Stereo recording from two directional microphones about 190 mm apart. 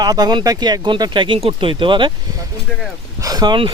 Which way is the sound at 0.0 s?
20° right (ahead or behind).